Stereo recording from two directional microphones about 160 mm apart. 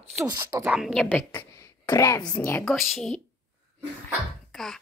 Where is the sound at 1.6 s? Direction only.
20° left (ahead or behind).